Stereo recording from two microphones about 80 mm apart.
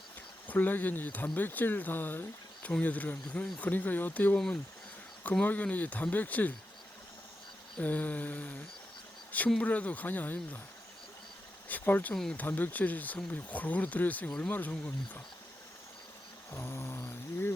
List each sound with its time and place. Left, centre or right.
0.4 s speech: left
7.8 s speech: centre
11.7 s speech: left
12.1 s speech: centre
12.4 s speech: left
16.5 s speech: left